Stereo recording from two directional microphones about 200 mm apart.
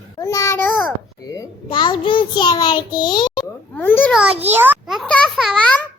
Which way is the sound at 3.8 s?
10° left (ahead or behind).